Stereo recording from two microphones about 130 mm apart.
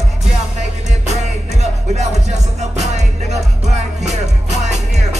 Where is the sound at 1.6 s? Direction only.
60° right (ahead or behind).